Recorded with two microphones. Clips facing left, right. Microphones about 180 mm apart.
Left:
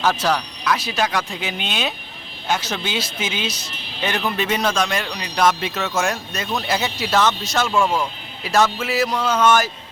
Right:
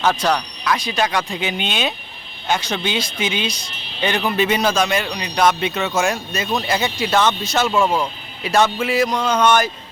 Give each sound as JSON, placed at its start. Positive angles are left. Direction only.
{"t": 0.0, "sound": "a man's voice", "side_deg": 5}
{"t": 7.7, "sound": "speech", "side_deg": -20}
{"t": 8.4, "sound": "a man's voice", "side_deg": 0}